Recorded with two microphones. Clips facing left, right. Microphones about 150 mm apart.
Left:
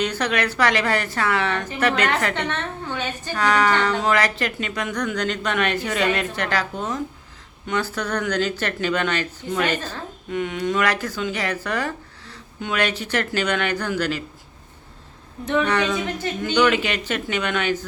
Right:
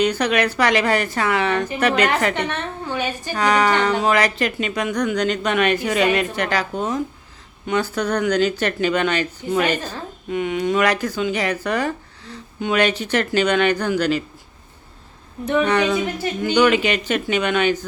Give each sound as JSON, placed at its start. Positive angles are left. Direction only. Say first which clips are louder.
{"t": 0.0, "sound": "a woman's voice", "louder": "right 4 dB", "side_deg": -15}
{"t": 15.4, "sound": "a woman's voice", "louder": "right 3 dB", "side_deg": -15}